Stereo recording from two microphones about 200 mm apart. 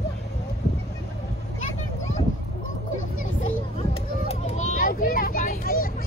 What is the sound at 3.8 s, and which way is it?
Children playing, 35° left (ahead or behind).